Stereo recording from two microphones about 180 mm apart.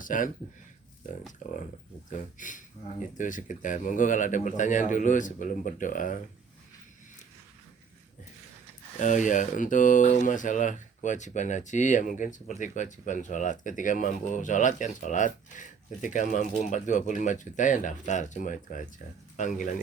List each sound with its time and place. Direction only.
0.0 s speech: 45° left (ahead or behind)
2.0 s speech: 45° left (ahead or behind)
9.0 s speech: 45° left (ahead or behind)